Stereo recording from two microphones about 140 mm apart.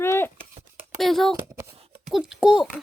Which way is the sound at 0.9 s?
Centre (ahead or behind).